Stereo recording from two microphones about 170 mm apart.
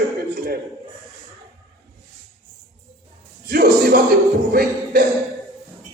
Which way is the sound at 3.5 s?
65° right (ahead or behind).